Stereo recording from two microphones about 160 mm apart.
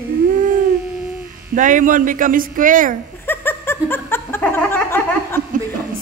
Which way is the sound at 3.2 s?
15° left (ahead or behind).